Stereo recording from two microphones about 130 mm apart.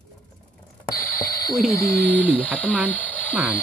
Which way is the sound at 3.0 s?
10° left (ahead or behind).